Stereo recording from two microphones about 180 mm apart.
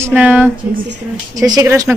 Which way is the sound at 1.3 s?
20° right (ahead or behind).